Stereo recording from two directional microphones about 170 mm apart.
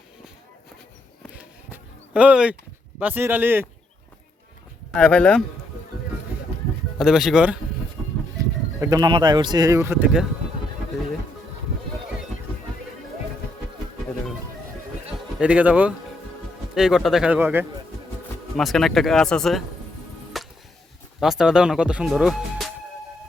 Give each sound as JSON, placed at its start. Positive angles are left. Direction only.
{"t": 1.7, "sound": "a sound", "side_deg": -10}
{"t": 3.0, "sound": "speech", "side_deg": -10}
{"t": 4.9, "sound": "speech", "side_deg": 5}
{"t": 7.0, "sound": "speech", "side_deg": 0}
{"t": 8.4, "sound": "speech", "side_deg": -20}
{"t": 15.4, "sound": "speech", "side_deg": -10}
{"t": 18.5, "sound": "speech", "side_deg": 0}
{"t": 20.4, "sound": "music", "side_deg": 0}
{"t": 21.2, "sound": "speech", "side_deg": 0}